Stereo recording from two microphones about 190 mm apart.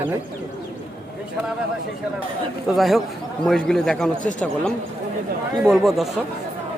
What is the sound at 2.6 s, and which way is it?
Speech, centre (ahead or behind).